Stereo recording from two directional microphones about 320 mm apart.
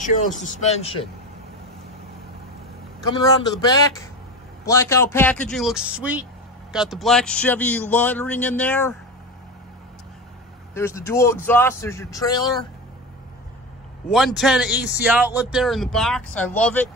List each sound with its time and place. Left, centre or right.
0.4 s a man's voice: left
3.0 s a man's voice: centre
10.7 s speech: centre
14.1 s speech: centre